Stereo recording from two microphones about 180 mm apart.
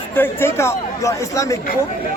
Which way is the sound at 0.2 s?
15° left (ahead or behind).